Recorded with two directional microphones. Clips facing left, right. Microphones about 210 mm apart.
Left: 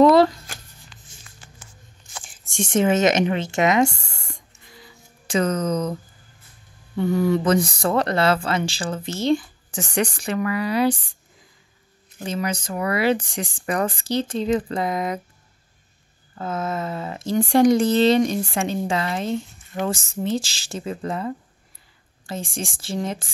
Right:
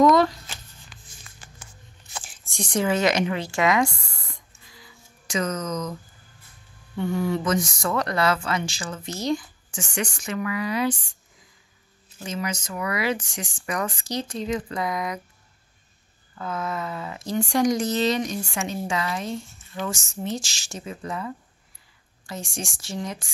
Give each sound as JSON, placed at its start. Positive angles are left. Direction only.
{"t": 0.0, "sound": "shuffling cards", "side_deg": 30}
{"t": 2.5, "sound": "a woman's voice", "side_deg": 25}
{"t": 4.0, "sound": "writing", "side_deg": 25}
{"t": 5.3, "sound": "speech", "side_deg": 30}
{"t": 7.0, "sound": "speech", "side_deg": 40}
{"t": 12.2, "sound": "a woman's voice", "side_deg": 35}
{"t": 16.3, "sound": "a woman's voice", "side_deg": 25}
{"t": 16.8, "sound": "speech", "side_deg": 45}
{"t": 17.5, "sound": "a woman's voice", "side_deg": 30}
{"t": 19.7, "sound": "speech", "side_deg": 55}
{"t": 20.2, "sound": "speech", "side_deg": 30}